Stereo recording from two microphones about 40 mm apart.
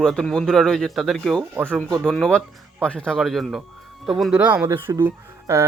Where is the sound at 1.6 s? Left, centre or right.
Left.